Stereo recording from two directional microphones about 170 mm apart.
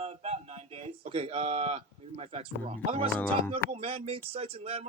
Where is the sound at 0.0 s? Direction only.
40° right (ahead or behind).